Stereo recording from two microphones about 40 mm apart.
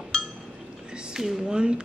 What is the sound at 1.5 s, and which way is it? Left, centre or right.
Speech, right.